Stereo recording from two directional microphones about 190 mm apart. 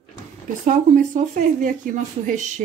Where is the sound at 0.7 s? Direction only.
40° right (ahead or behind).